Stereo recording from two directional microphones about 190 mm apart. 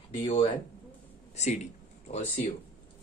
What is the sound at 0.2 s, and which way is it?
Speech, 25° left (ahead or behind).